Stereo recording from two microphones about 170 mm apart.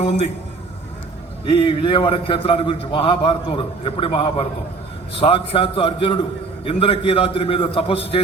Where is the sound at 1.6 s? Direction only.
30° left (ahead or behind).